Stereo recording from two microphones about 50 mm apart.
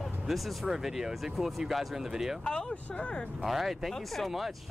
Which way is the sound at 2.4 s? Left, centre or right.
Centre.